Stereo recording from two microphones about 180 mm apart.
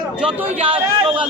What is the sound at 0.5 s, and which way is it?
Speech, 30° right (ahead or behind).